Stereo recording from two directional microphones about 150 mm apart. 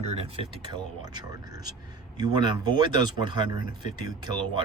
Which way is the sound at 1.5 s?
25° right (ahead or behind).